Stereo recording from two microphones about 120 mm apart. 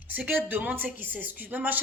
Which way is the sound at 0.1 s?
15° right (ahead or behind).